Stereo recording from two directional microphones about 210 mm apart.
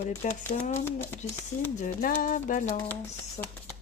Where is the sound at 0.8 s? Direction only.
10° left (ahead or behind).